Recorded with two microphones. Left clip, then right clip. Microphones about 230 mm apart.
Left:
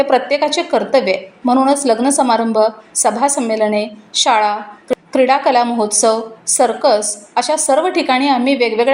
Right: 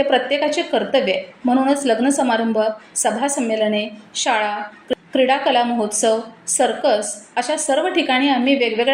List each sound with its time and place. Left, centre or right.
0.0 s a woman's voice: centre